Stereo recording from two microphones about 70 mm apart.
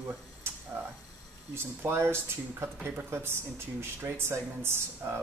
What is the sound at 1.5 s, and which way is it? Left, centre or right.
Speech, right.